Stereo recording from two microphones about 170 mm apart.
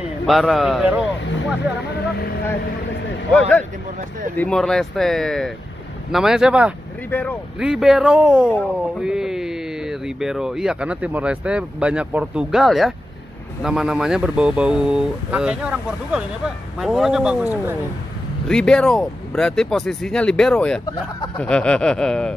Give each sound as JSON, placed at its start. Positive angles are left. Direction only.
{"t": 0.3, "sound": "speech", "side_deg": 0}
{"t": 3.3, "sound": "speech", "side_deg": 5}
{"t": 7.1, "sound": "speech", "side_deg": 10}
{"t": 7.5, "sound": "speech", "side_deg": -5}
{"t": 18.5, "sound": "speech", "side_deg": 5}
{"t": 20.8, "sound": "speech", "side_deg": 25}
{"t": 21.4, "sound": "speech", "side_deg": 5}